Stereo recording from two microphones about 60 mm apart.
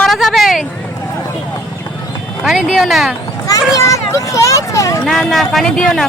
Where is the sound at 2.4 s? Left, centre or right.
Centre.